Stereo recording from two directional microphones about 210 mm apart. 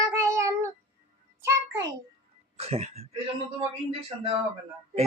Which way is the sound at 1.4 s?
15° right (ahead or behind).